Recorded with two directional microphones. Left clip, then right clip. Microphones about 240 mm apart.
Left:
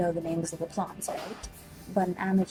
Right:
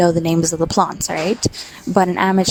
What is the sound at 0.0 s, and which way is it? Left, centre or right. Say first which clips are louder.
Speech: right 14 dB; right.